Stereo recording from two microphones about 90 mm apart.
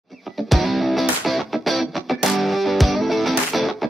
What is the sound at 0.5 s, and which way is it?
Music, centre (ahead or behind).